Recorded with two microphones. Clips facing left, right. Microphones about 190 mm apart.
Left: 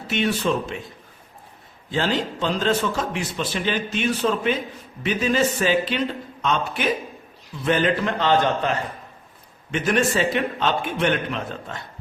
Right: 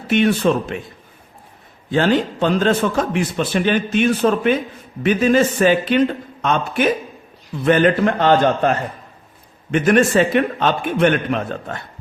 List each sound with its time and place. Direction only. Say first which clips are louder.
0.1 s a man's voice: right 7 dB; 55° right (ahead or behind)
1.9 s a man's voice: right 7 dB; 55° right (ahead or behind)